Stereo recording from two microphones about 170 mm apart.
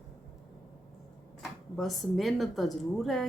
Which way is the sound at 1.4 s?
Centre (ahead or behind).